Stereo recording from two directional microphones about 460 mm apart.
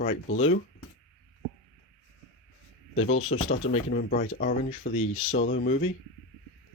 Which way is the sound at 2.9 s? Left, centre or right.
Left.